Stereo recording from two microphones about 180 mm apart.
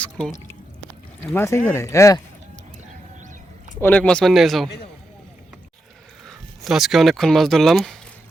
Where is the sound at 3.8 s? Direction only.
10° left (ahead or behind).